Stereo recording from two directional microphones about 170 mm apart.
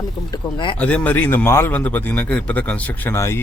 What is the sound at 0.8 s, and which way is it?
A man's voice, 10° left (ahead or behind).